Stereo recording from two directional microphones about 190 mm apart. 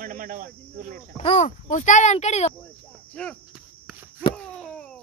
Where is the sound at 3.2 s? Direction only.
5° left (ahead or behind).